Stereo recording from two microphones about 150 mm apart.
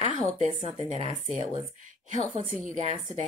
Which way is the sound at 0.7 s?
45° right (ahead or behind).